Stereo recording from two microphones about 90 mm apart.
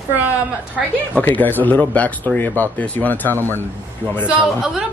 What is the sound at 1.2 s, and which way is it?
Speech, 20° left (ahead or behind).